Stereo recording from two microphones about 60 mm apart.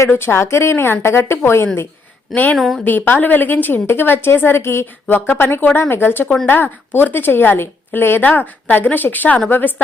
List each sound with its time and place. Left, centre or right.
0.1 s a woman's voice: left
2.3 s a woman's voice: left
2.6 s a woman's voice: centre
2.8 s a woman's voice: left
5.0 s a woman's voice: left